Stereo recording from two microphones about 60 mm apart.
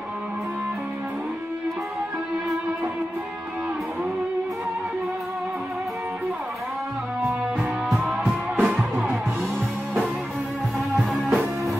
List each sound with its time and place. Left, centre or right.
8.1 s music: centre
8.5 s music: right
10.9 s music: centre